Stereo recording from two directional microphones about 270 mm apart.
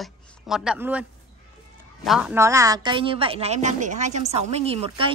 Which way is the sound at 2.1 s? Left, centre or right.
Centre.